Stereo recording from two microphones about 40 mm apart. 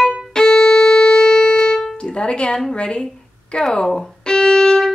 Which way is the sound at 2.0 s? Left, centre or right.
Left.